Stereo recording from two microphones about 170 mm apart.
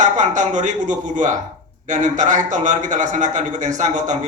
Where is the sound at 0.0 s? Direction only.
45° right (ahead or behind).